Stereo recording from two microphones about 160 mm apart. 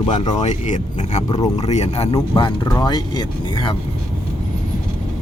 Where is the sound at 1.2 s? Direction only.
30° left (ahead or behind).